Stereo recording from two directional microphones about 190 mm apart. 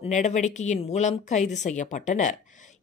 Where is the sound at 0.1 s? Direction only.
40° left (ahead or behind).